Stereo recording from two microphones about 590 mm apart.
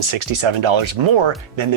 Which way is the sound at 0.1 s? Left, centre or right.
Right.